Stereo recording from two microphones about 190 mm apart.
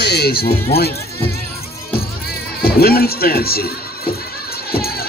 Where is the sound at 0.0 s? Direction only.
60° left (ahead or behind).